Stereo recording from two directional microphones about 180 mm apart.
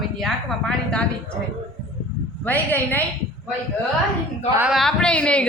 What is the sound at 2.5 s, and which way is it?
Speech, 10° left (ahead or behind).